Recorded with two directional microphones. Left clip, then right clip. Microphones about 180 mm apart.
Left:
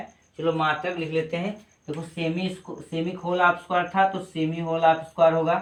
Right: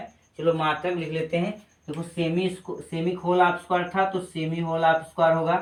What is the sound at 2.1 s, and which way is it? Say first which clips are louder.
Speech: right 3 dB; 15° left (ahead or behind).